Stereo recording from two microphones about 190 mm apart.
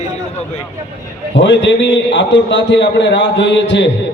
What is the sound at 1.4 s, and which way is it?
A man's voice, 70° left (ahead or behind).